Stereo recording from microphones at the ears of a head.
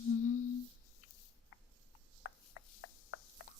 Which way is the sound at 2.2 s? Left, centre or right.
Left.